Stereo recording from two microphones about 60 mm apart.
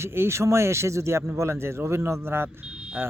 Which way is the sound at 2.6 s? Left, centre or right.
Centre.